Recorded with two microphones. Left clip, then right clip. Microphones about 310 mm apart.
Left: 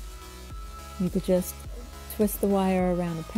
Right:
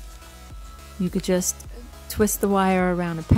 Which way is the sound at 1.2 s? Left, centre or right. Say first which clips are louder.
Right 1 dB; centre.